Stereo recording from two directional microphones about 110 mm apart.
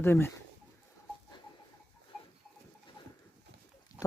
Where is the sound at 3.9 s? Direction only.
35° left (ahead or behind).